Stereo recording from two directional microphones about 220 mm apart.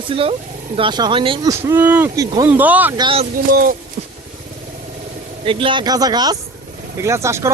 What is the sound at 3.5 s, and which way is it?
Speech, 40° right (ahead or behind).